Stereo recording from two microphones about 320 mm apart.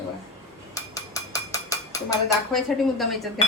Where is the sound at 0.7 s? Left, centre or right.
Centre.